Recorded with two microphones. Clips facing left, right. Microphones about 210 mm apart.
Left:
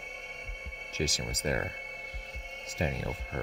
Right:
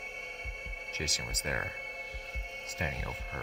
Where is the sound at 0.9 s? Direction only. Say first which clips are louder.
Left 7 dB; 30° left (ahead or behind).